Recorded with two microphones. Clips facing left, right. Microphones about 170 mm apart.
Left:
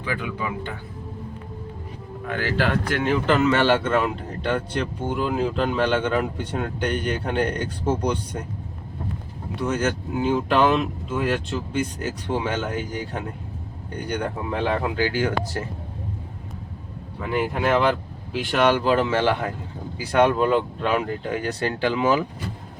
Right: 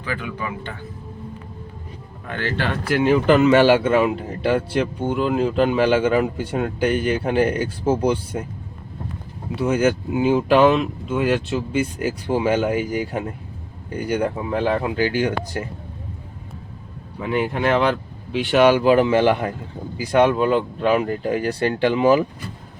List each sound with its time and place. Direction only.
0.0 s speech: 15° left (ahead or behind)
2.2 s speech: 5° left (ahead or behind)
2.9 s speech: 5° right (ahead or behind)
9.6 s speech: 10° right (ahead or behind)
15.1 s speech: 20° right (ahead or behind)
17.2 s speech: centre (ahead or behind)
21.6 s speech: 20° right (ahead or behind)